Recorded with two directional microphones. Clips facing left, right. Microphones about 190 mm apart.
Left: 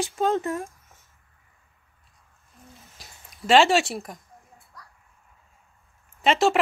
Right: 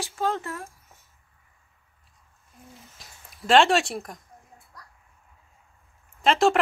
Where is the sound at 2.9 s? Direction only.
Centre (ahead or behind).